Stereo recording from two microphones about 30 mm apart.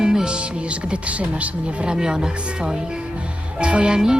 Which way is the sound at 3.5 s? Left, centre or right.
Right.